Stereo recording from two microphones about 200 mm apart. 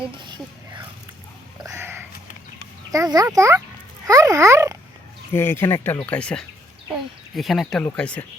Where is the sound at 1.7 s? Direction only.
10° right (ahead or behind).